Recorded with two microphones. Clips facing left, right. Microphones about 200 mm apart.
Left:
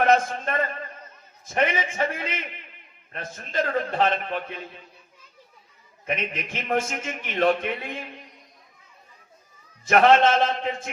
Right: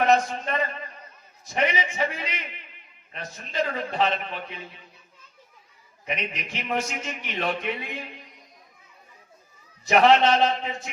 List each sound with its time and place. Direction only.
0.0 s a sound: 50° left (ahead or behind)
1.5 s a man's voice: 50° left (ahead or behind)
6.1 s a man's voice: 50° left (ahead or behind)
9.8 s a man's voice: 50° left (ahead or behind)